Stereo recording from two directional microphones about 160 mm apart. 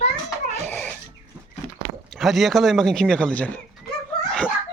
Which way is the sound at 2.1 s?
Centre (ahead or behind).